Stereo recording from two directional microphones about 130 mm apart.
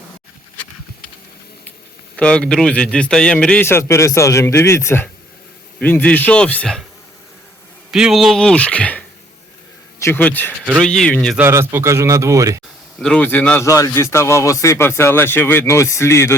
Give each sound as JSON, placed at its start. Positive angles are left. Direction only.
{"t": 2.1, "sound": "a man's voice", "side_deg": 10}
{"t": 7.9, "sound": "a man's voice", "side_deg": -5}
{"t": 11.3, "sound": "speech", "side_deg": -20}
{"t": 13.0, "sound": "a man's voice", "side_deg": 5}
{"t": 13.7, "sound": "speech", "side_deg": 25}